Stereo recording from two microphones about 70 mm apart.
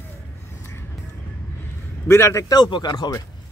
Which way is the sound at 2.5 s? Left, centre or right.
Left.